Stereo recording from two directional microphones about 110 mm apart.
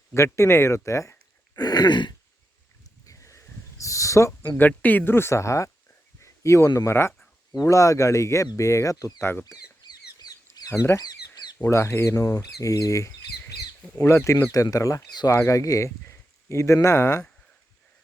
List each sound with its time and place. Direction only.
0.1 s speech: 25° left (ahead or behind)
1.5 s throat clearing: 40° left (ahead or behind)
3.1 s a sound: 30° left (ahead or behind)
4.5 s speech: 15° left (ahead or behind); by 9.3 s 30° left (ahead or behind)
9.8 s bird: 35° left (ahead or behind)
10.7 s speech: 25° left (ahead or behind)